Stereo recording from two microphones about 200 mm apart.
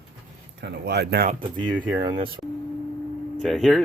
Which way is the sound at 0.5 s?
55° right (ahead or behind).